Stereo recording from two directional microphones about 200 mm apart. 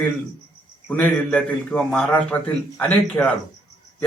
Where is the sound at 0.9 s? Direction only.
10° left (ahead or behind).